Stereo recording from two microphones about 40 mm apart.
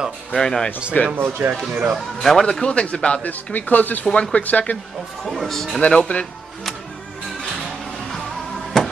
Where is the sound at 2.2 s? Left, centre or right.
Centre.